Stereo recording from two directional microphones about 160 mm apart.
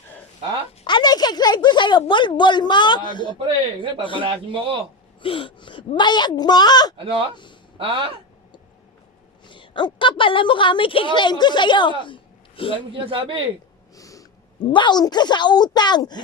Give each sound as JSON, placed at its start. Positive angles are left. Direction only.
{"t": 0.9, "sound": "a woman's voice", "side_deg": 30}
{"t": 4.2, "sound": "a man's voice", "side_deg": -35}
{"t": 5.2, "sound": "speech", "side_deg": 35}
{"t": 6.9, "sound": "a man's voice", "side_deg": -35}
{"t": 9.5, "sound": "a woman's voice", "side_deg": 30}
{"t": 12.9, "sound": "a man's voice", "side_deg": -35}
{"t": 13.9, "sound": "a woman's voice", "side_deg": 20}